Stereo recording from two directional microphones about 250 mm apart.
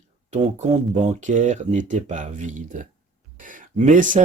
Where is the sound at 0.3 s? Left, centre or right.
Right.